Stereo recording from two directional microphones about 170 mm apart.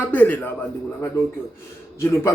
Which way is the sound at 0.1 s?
10° left (ahead or behind).